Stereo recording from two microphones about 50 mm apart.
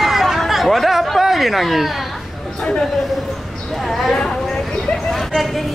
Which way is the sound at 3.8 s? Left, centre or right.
Centre.